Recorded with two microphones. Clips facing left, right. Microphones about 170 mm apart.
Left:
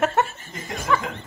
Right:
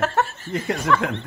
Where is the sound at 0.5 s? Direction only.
70° right (ahead or behind).